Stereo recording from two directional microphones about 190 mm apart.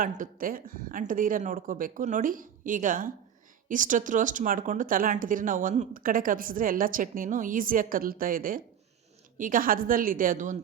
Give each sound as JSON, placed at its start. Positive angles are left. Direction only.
{"t": 0.0, "sound": "speech", "side_deg": -45}